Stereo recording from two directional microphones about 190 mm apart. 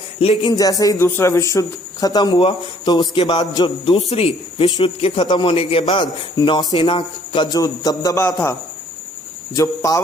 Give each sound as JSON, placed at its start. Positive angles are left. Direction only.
{"t": 0.2, "sound": "a man's voice", "side_deg": 25}
{"t": 9.6, "sound": "speech", "side_deg": 20}